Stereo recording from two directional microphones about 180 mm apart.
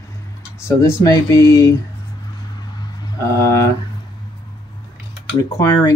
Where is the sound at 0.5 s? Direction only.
15° left (ahead or behind).